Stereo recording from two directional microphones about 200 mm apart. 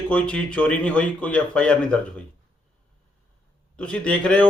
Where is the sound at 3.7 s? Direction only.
5° left (ahead or behind).